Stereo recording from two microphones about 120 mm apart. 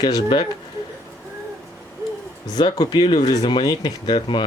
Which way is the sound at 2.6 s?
35° left (ahead or behind).